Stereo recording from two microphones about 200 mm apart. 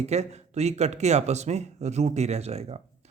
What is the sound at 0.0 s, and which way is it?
Speech, 35° right (ahead or behind).